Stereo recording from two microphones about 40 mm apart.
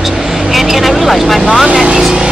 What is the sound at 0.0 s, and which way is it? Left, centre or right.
Vehicle, centre.